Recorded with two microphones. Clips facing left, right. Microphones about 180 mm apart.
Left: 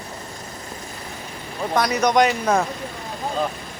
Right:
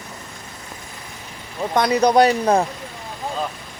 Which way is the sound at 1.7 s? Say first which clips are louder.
Right 3 dB; 30° right (ahead or behind).